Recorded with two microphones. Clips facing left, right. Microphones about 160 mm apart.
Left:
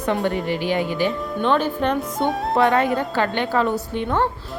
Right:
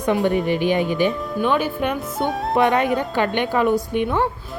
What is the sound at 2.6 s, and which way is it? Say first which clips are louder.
A woman's voice: right 1 dB; 20° right (ahead or behind).